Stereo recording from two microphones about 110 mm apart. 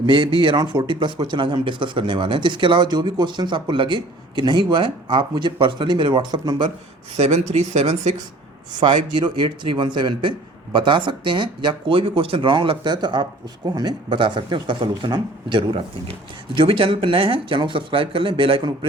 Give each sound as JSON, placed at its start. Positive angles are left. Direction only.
{"t": 0.0, "sound": "speech", "side_deg": -45}
{"t": 7.2, "sound": "speech", "side_deg": -90}
{"t": 8.8, "sound": "speech", "side_deg": -45}